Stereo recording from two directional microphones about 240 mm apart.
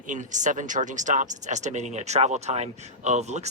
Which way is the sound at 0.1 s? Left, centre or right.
Right.